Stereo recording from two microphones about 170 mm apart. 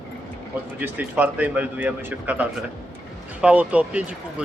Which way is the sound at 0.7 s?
10° right (ahead or behind).